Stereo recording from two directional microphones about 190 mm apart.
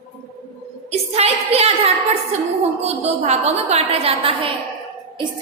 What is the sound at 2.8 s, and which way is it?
A woman's voice, 35° right (ahead or behind).